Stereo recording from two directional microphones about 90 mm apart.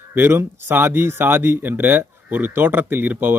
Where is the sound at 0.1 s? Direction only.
25° right (ahead or behind).